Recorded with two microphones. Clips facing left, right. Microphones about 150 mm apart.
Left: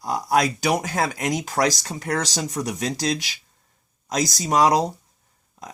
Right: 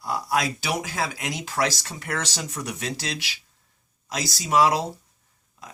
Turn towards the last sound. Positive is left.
turn(degrees=40)  # may be behind; listen again after turning